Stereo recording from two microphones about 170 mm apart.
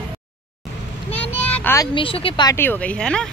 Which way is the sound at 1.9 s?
30° left (ahead or behind).